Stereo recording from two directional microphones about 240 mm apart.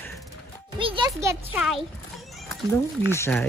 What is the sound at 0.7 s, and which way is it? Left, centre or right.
Speech, right.